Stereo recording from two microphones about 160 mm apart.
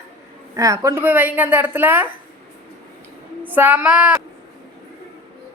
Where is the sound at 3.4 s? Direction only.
10° right (ahead or behind).